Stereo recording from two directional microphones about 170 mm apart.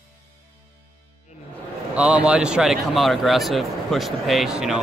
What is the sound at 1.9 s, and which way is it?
Speech, 5° right (ahead or behind).